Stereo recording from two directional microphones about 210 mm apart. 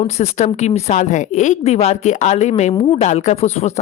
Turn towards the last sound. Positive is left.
turn(degrees=30)  # may be behind; listen again after turning